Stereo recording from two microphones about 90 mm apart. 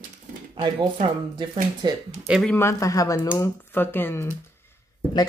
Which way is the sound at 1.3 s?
65° right (ahead or behind).